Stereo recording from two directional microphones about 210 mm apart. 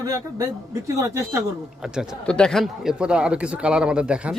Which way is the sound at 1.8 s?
5° right (ahead or behind).